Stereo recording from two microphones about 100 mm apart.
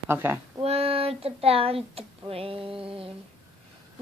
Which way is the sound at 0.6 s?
75° right (ahead or behind).